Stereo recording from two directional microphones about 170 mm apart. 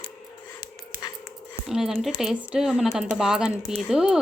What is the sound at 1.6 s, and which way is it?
Speech, centre (ahead or behind).